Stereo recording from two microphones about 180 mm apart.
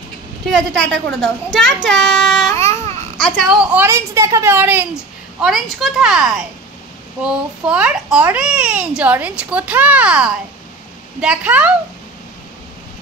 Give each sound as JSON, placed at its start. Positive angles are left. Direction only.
{"t": 0.5, "sound": "a child's voice", "side_deg": 5}
{"t": 2.5, "sound": "baby cry", "side_deg": 15}
{"t": 3.2, "sound": "a child's voice", "side_deg": 5}
{"t": 3.7, "sound": "a child's voice", "side_deg": -15}